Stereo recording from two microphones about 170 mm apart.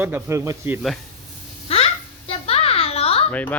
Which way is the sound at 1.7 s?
35° left (ahead or behind).